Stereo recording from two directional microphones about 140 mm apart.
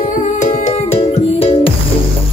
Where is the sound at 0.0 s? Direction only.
70° left (ahead or behind).